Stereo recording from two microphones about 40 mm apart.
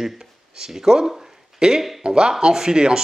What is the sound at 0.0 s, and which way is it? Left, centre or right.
Speech, centre.